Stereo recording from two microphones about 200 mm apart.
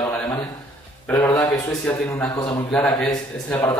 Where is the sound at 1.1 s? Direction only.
10° left (ahead or behind).